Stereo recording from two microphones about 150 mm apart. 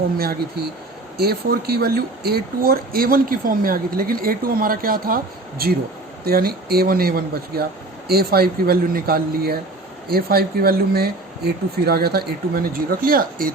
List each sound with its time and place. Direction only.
0.2 s speech: 90° right